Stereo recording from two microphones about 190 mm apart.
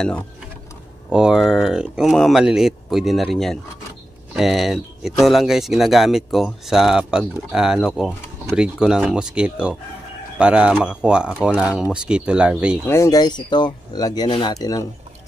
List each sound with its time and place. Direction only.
1.1 s speech: 5° right (ahead or behind)
12.8 s speech: 15° left (ahead or behind)